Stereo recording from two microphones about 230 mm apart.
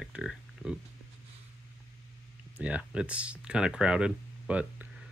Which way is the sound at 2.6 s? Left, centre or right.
Centre.